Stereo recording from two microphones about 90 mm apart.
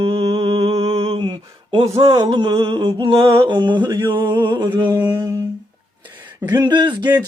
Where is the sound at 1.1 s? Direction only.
70° right (ahead or behind).